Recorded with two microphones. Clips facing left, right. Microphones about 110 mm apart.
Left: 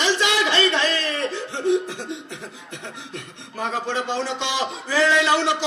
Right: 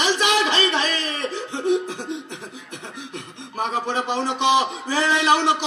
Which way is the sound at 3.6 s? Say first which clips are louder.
Right 1 dB; 20° right (ahead or behind).